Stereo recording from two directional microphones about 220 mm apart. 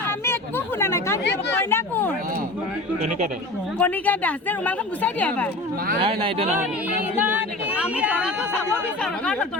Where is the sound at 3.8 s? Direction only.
5° left (ahead or behind).